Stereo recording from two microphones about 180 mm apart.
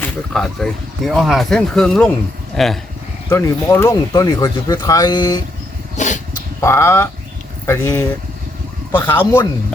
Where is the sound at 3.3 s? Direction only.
15° left (ahead or behind).